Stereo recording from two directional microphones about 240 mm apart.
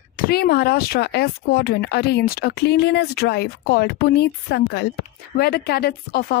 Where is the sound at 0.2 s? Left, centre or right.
Left.